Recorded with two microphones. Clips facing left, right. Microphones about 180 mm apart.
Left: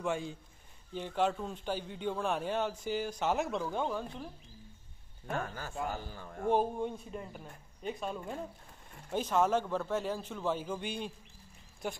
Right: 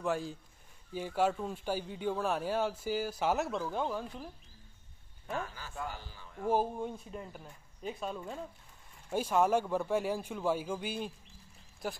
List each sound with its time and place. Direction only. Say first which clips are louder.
0.0 s a man's voice: right 1 dB; centre (ahead or behind)
5.3 s a man's voice: left 2 dB; 50° left (ahead or behind)
6.5 s speech: left 1 dB; 5° right (ahead or behind)
9.1 s a man's voice: right 1 dB; 10° right (ahead or behind)